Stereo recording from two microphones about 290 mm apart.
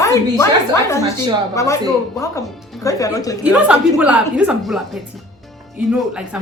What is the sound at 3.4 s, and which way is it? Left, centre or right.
A woman's voice, centre.